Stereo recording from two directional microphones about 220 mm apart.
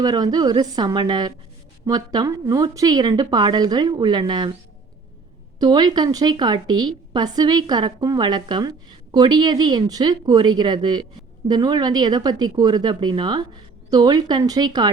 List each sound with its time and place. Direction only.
0.0 s a woman's voice: 20° right (ahead or behind)
5.5 s a woman's voice: 20° right (ahead or behind)